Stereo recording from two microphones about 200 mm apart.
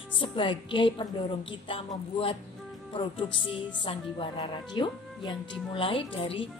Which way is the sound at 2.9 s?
25° left (ahead or behind).